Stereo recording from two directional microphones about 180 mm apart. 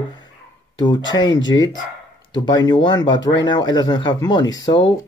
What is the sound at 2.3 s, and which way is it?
Speech, 25° left (ahead or behind).